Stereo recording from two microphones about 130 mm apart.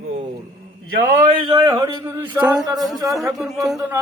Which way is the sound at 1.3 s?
35° right (ahead or behind).